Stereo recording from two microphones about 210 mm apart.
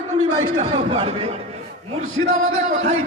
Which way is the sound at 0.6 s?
25° right (ahead or behind).